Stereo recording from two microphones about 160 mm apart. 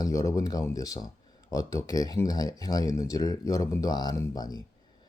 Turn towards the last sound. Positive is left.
turn(degrees=25)  # may be behind; listen again after turning